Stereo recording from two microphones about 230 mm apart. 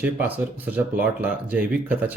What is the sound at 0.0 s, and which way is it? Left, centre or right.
Speech, centre.